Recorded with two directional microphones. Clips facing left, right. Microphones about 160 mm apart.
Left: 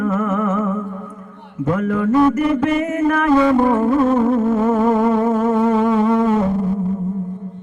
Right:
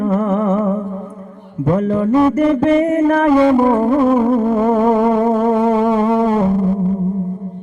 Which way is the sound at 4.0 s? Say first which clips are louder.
Right 2 dB; 10° right (ahead or behind).